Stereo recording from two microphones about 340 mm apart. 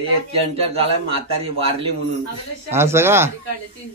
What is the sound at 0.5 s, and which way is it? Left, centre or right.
Speech, centre.